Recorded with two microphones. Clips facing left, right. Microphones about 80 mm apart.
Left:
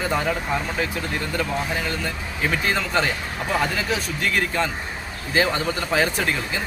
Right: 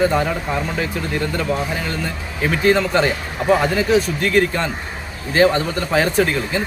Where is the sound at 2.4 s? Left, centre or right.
Centre.